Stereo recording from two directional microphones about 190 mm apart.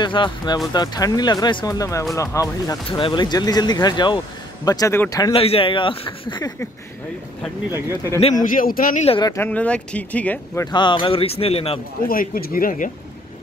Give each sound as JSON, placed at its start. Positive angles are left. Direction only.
{"t": 0.0, "sound": "speech", "side_deg": 25}
{"t": 5.4, "sound": "speech", "side_deg": 30}
{"t": 8.2, "sound": "a man's voice", "side_deg": 40}
{"t": 9.0, "sound": "speech", "side_deg": 30}
{"t": 9.3, "sound": "speech", "side_deg": 10}
{"t": 12.1, "sound": "a man's voice", "side_deg": 50}